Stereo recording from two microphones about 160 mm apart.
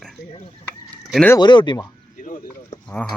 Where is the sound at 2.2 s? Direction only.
55° left (ahead or behind).